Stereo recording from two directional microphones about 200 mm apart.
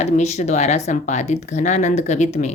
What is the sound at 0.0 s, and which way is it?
Speech, 35° left (ahead or behind).